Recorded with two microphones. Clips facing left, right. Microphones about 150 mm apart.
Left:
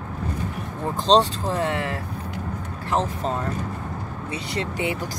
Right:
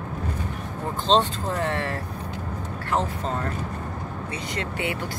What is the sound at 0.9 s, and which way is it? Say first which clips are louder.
Speech: left 3 dB; 35° left (ahead or behind).